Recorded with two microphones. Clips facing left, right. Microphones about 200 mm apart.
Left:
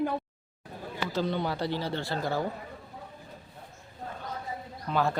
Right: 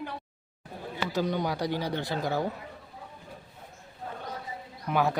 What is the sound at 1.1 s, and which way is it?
Speech, 15° right (ahead or behind).